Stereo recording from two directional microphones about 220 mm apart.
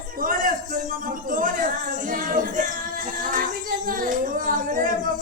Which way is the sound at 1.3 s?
40° right (ahead or behind).